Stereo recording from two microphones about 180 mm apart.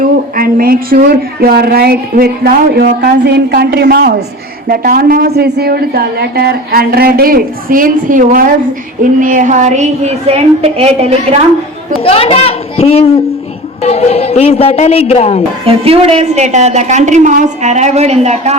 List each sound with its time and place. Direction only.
0.0 s a woman's voice: 50° right (ahead or behind); by 11.3 s 35° right (ahead or behind)
12.0 s a man's voice: 30° left (ahead or behind)
15.6 s a woman's voice: 35° right (ahead or behind)